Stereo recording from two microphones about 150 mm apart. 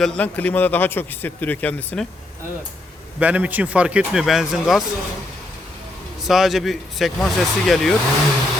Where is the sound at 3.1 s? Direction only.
10° right (ahead or behind).